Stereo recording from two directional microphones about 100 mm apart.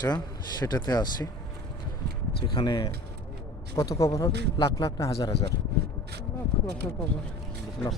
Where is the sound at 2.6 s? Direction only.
55° left (ahead or behind).